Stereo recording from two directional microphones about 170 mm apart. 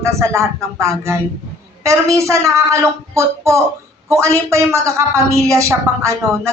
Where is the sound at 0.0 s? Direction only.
15° right (ahead or behind).